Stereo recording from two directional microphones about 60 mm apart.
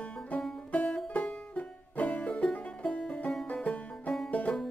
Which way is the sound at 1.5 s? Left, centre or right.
Left.